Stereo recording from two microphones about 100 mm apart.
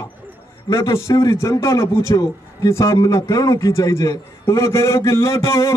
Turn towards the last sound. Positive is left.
turn(degrees=30)  # may be behind; listen again after turning